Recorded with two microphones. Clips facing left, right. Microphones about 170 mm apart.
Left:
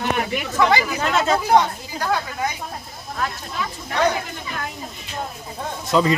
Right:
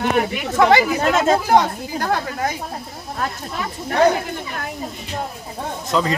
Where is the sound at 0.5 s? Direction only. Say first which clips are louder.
Right 5 dB; 45° right (ahead or behind).